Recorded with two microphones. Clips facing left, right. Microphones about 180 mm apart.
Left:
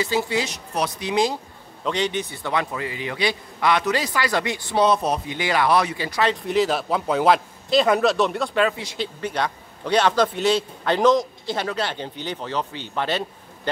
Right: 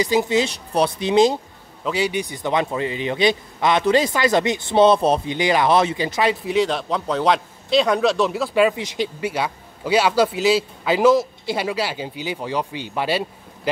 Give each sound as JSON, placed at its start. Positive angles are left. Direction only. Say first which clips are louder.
{"t": 0.0, "sound": "a man's voice", "louder": "right 5 dB", "side_deg": -15}
{"t": 1.9, "sound": "a man's voice", "louder": "right 2 dB", "side_deg": -10}
{"t": 6.2, "sound": "a man's voice", "louder": "right 1 dB", "side_deg": 0}
{"t": 8.6, "sound": "a man's voice", "louder": "right 4 dB", "side_deg": -15}